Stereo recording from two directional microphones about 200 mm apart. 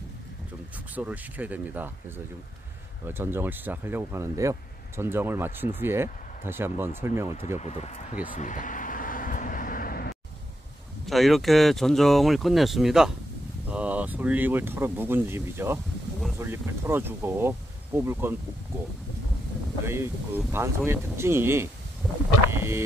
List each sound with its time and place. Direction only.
0.9 s speech: 10° right (ahead or behind)
7.6 s speech: 35° left (ahead or behind)
8.3 s vehicle: 40° left (ahead or behind)
11.1 s speech: centre (ahead or behind)
19.8 s speech: 10° right (ahead or behind)
22.5 s a sound: 10° right (ahead or behind)